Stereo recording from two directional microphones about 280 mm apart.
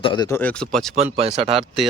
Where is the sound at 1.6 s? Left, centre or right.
Centre.